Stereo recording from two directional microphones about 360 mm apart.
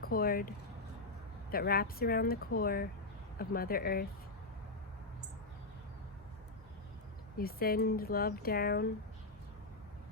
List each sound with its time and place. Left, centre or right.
0.0 s speech: left
7.3 s speech: left